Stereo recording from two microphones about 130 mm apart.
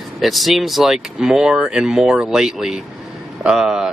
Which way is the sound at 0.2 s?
Centre (ahead or behind).